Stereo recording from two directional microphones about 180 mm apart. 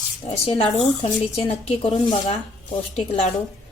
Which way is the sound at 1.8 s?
25° left (ahead or behind).